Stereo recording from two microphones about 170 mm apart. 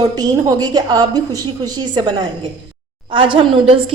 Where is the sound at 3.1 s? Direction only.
30° right (ahead or behind).